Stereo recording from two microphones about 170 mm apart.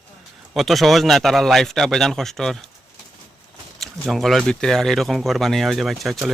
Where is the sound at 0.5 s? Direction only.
Centre (ahead or behind).